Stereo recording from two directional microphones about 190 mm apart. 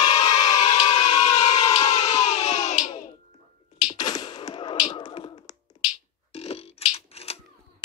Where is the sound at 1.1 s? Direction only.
20° left (ahead or behind).